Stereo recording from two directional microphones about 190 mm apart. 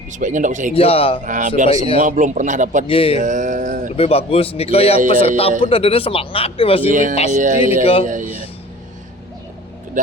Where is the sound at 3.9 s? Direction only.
30° left (ahead or behind).